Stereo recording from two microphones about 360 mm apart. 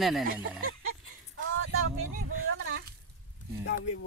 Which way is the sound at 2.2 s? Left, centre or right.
Right.